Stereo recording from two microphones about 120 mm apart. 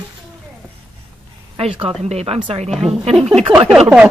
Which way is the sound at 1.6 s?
55° right (ahead or behind).